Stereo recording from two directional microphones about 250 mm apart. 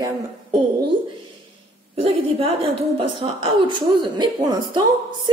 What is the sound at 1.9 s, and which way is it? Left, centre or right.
A woman's voice, right.